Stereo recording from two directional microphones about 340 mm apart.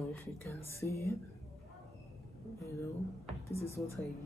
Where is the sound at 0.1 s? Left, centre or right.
Centre.